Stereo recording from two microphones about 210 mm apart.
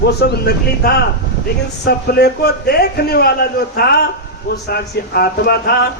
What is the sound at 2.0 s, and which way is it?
Speech, 50° left (ahead or behind).